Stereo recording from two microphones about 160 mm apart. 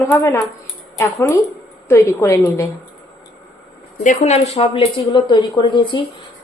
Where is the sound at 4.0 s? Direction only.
50° left (ahead or behind); by 6.0 s 30° left (ahead or behind).